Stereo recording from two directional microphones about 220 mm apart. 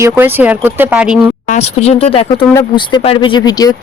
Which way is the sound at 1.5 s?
30° left (ahead or behind).